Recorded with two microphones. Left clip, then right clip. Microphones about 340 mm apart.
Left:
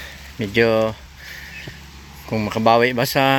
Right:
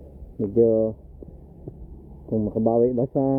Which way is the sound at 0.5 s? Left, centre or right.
Left.